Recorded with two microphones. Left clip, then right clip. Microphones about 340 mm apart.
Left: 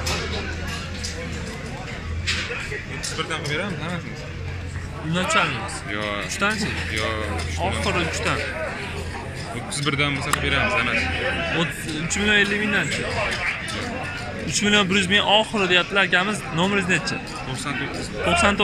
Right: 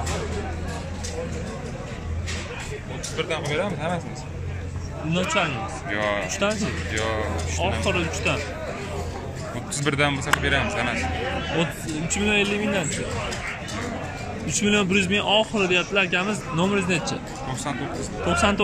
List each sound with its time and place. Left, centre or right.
3.3 s a man's voice: right
5.9 s a man's voice: right
6.4 s speech: centre
6.9 s a man's voice: right
7.6 s speech: centre
9.8 s a man's voice: right
11.5 s speech: centre
14.5 s speech: centre
18.3 s speech: centre